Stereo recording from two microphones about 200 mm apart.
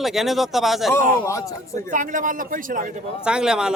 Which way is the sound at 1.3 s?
15° left (ahead or behind).